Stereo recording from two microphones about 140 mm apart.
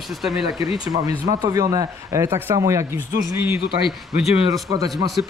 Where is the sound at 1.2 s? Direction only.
25° right (ahead or behind).